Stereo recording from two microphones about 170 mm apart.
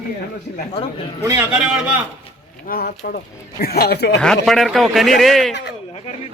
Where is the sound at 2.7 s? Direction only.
65° left (ahead or behind).